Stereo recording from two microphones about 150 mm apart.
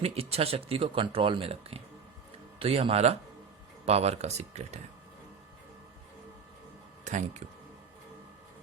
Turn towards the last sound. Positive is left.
turn(degrees=-55)  # may be behind; listen again after turning